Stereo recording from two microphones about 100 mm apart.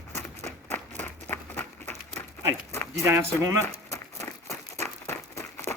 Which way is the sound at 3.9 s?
30° left (ahead or behind).